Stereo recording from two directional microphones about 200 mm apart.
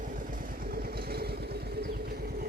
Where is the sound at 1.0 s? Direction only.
50° right (ahead or behind).